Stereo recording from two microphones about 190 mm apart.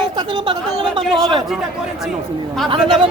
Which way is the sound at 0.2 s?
25° right (ahead or behind).